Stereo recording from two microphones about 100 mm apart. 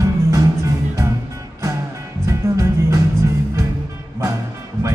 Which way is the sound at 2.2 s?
30° right (ahead or behind).